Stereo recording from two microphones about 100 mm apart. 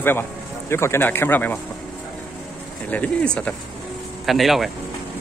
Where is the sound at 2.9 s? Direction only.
15° left (ahead or behind).